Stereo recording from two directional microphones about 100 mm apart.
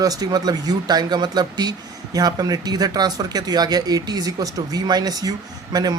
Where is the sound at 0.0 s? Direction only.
40° right (ahead or behind).